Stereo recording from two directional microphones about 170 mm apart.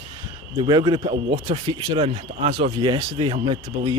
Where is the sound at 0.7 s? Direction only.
25° right (ahead or behind).